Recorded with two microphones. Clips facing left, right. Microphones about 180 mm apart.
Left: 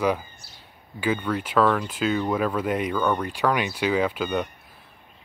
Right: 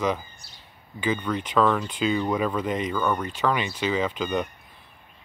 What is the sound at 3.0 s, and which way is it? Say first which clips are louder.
Speech: left 1 dB; 5° right (ahead or behind).